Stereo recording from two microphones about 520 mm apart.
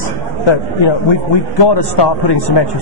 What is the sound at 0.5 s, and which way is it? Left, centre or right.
A man's voice, left.